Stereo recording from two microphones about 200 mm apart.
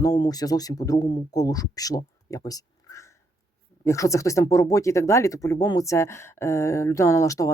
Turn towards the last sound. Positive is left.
turn(degrees=15)  # may be behind; listen again after turning